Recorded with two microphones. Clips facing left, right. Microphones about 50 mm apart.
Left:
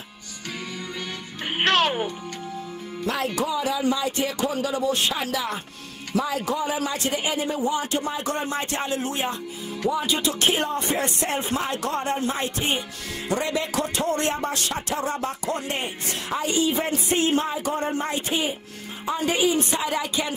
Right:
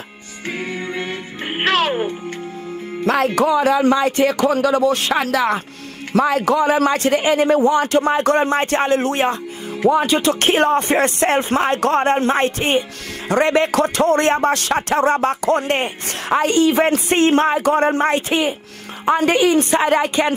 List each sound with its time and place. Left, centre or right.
0.5 s music: right
1.5 s music: centre
3.3 s a man's voice: right